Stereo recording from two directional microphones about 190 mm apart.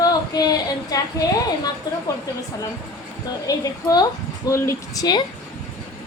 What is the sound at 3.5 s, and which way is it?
Speech, 20° left (ahead or behind).